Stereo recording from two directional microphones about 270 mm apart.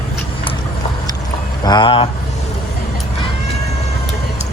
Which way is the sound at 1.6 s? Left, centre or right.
Centre.